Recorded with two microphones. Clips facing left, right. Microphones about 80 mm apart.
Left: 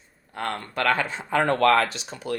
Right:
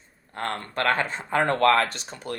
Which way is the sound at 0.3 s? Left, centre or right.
Right.